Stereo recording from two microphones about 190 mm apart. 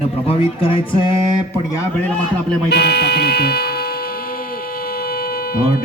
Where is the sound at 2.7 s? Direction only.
60° left (ahead or behind).